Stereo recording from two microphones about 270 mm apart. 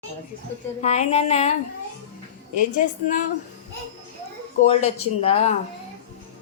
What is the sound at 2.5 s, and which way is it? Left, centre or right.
Speech, left.